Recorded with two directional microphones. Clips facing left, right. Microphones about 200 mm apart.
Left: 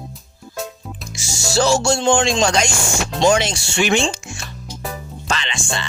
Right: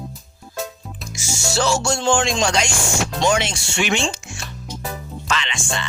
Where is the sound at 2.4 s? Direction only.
45° left (ahead or behind).